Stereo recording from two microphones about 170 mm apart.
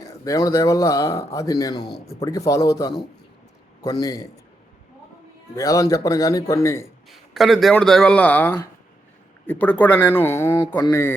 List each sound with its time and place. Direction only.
0.0 s speech: 20° left (ahead or behind)
4.0 s speech: 20° left (ahead or behind)
5.5 s speech: 20° left (ahead or behind)
7.1 s speech: centre (ahead or behind)
10.8 s speech: 25° left (ahead or behind)